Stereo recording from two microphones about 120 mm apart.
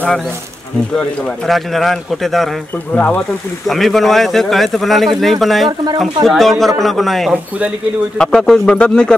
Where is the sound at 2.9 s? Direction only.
15° left (ahead or behind).